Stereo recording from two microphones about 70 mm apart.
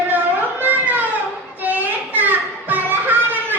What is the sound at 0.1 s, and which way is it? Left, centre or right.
Music, right.